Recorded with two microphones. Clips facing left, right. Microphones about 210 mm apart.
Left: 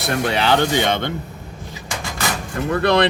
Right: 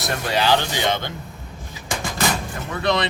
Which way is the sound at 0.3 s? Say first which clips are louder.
Left 1 dB; 60° left (ahead or behind).